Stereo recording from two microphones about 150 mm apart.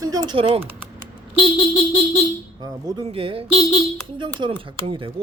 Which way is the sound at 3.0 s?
40° right (ahead or behind).